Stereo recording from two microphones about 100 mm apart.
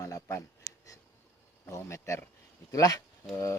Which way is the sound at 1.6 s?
30° left (ahead or behind).